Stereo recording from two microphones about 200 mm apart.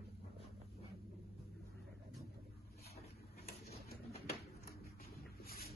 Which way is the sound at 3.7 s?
50° left (ahead or behind).